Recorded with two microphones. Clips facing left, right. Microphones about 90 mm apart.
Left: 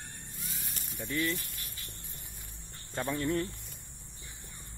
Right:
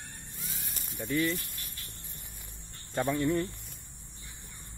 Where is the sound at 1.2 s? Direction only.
Centre (ahead or behind).